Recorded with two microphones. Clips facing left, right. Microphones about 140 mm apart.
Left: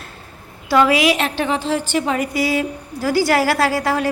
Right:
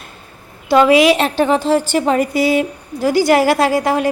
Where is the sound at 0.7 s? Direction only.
20° right (ahead or behind).